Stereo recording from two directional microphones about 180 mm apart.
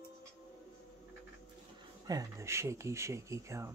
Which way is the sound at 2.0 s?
20° right (ahead or behind).